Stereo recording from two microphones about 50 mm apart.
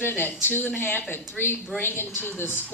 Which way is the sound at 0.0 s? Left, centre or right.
Left.